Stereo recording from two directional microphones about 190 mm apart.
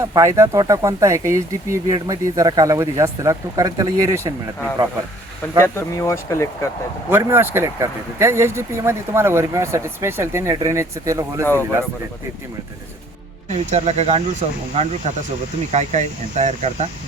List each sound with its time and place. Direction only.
0.0 s speech: 15° right (ahead or behind)
5.6 s speech: 15° left (ahead or behind)
7.1 s speech: 10° right (ahead or behind)
13.5 s speech: 35° right (ahead or behind)